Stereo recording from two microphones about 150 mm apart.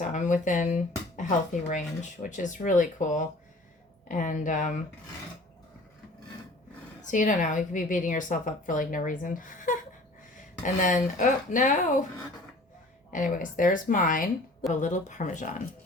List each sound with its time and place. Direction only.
0.0 s a woman's voice: 60° left (ahead or behind)
7.0 s a woman's voice: 60° left (ahead or behind)
13.1 s a woman's voice: 60° left (ahead or behind)
14.7 s a woman's voice: 55° left (ahead or behind)